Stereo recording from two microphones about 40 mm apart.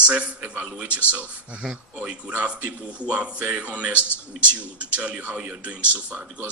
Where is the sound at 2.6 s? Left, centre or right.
Right.